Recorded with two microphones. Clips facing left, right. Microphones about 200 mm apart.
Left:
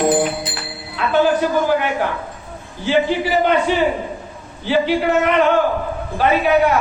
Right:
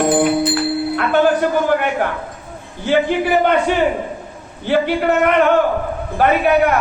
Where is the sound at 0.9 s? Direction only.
55° right (ahead or behind).